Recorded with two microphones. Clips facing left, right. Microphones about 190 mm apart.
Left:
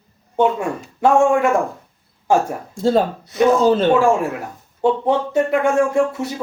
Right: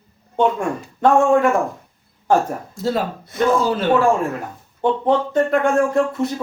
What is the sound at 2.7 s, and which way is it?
Speech, 30° left (ahead or behind).